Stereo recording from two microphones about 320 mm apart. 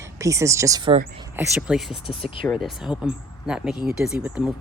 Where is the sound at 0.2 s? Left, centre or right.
Centre.